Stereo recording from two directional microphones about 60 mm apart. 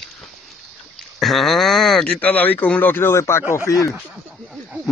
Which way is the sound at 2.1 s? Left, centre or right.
Left.